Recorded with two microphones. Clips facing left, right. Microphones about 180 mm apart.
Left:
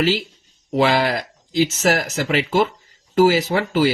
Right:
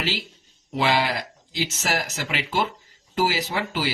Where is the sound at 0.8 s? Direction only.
45° left (ahead or behind).